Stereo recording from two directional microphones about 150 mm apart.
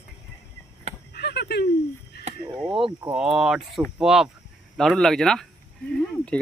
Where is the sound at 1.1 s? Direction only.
90° left.